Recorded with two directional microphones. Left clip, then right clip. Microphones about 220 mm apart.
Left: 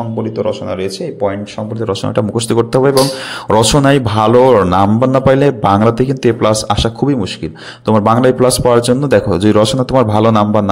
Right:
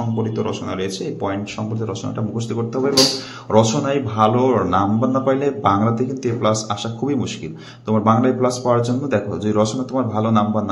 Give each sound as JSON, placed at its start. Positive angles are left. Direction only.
{"t": 0.4, "sound": "speech", "side_deg": 25}
{"t": 1.9, "sound": "a man's voice", "side_deg": 50}